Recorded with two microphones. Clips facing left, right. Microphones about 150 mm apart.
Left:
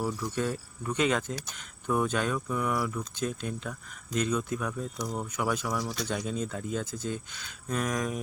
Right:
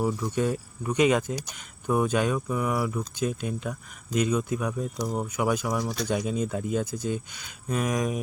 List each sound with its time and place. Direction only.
0.0 s speech: 15° right (ahead or behind)
4.9 s speech: 25° right (ahead or behind)
5.2 s speech: 15° right (ahead or behind)